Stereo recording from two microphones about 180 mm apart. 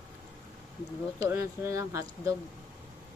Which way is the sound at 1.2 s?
15° right (ahead or behind).